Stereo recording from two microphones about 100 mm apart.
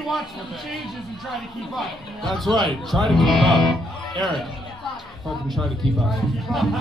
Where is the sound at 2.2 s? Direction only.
Centre (ahead or behind).